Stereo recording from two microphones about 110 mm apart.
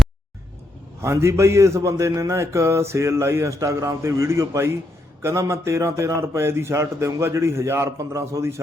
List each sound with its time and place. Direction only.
1.0 s a man's voice: 25° right (ahead or behind)